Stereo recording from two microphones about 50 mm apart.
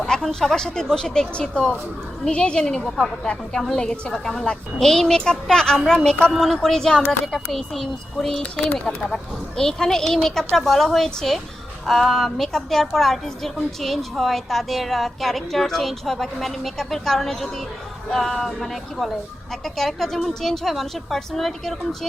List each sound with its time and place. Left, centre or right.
0.0 s speech: centre
2.2 s speech: centre
2.8 s a woman's voice: centre
4.1 s a woman's voice: centre